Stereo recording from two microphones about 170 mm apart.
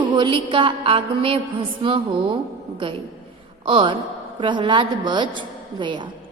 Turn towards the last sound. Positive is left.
turn(degrees=-30)  # may be behind; listen again after turning